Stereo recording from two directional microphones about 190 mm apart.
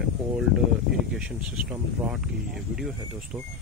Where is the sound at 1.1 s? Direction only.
5° right (ahead or behind).